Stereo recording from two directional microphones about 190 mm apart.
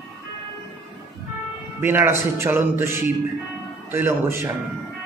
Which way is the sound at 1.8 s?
10° right (ahead or behind).